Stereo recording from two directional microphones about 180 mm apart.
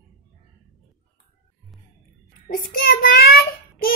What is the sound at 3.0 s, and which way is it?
Child singing, 55° left (ahead or behind).